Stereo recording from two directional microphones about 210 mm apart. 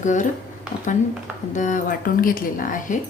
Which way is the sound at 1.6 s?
40° left (ahead or behind).